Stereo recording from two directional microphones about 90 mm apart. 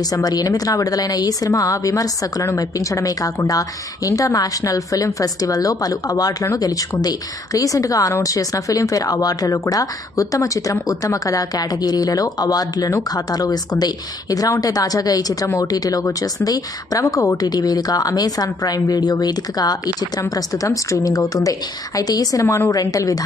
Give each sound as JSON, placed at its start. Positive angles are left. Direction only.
{"t": 0.1, "sound": "a woman's voice", "side_deg": 45}